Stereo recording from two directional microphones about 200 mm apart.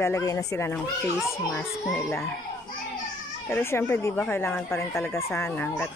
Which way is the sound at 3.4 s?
10° left (ahead or behind).